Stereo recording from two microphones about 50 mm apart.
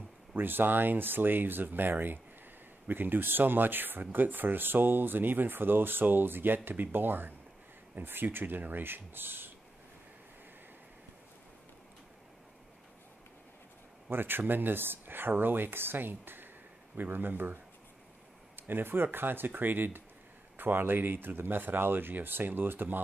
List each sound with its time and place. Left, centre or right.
0.4 s speech: right
14.0 s speech: right
18.6 s speech: right